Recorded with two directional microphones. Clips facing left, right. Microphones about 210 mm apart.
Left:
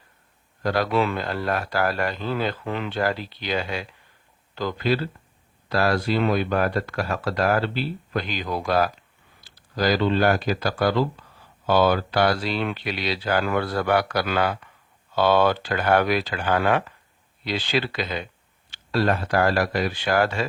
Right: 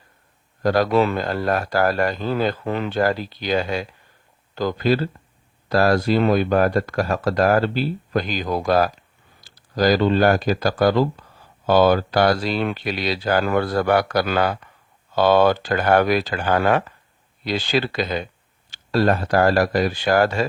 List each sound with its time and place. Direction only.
0.6 s speech: 40° right (ahead or behind)